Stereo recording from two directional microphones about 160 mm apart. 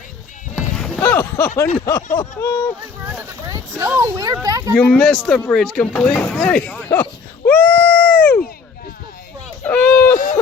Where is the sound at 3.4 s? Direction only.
20° right (ahead or behind).